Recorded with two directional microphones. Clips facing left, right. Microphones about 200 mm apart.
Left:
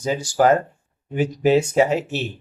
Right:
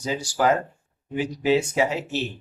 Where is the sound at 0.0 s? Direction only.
45° left (ahead or behind).